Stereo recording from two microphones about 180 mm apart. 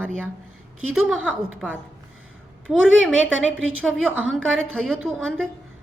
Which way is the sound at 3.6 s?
90° right.